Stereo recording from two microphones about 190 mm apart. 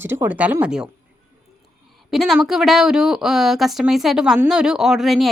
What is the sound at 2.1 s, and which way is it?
Speech, centre (ahead or behind).